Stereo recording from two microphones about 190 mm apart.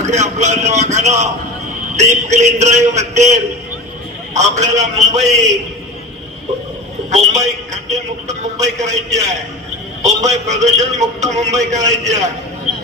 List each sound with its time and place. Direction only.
0.1 s a man's voice: 40° right (ahead or behind)
7.1 s a man's voice: 35° right (ahead or behind)